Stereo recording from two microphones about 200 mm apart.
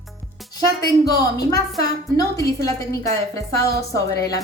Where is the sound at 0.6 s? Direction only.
15° left (ahead or behind).